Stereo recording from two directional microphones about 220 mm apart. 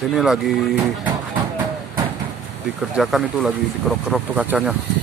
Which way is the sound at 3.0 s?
Centre (ahead or behind).